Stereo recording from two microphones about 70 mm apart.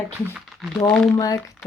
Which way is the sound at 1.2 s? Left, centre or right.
Left.